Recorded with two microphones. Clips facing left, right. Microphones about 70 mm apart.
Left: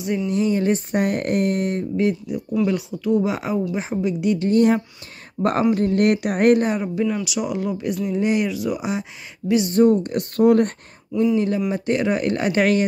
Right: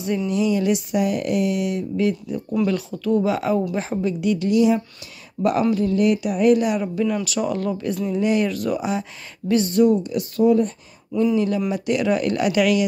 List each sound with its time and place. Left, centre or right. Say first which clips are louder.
0.3 s speech: even; left
2.0 s speech: left 1 dB; centre
4.5 s speech: left 1 dB; left
6.8 s speech: even; left
8.5 s speech: right 1 dB; centre
9.7 s speech: left 2 dB; left
10.0 s speech: left 1 dB; left
11.3 s speech: even; left